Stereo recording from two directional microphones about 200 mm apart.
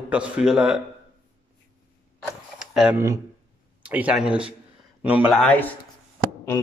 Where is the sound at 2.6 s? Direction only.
5° right (ahead or behind).